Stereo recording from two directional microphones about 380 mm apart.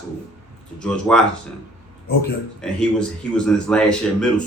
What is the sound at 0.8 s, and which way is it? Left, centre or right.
Speech, centre.